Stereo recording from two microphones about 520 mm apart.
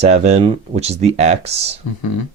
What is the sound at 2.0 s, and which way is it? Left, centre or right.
Speech, left.